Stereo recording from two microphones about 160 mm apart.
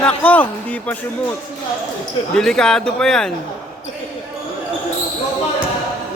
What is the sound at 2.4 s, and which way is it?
Speech, 5° left (ahead or behind).